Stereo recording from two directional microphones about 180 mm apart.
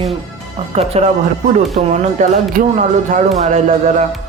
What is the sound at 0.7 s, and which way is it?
A woman's voice, 35° right (ahead or behind).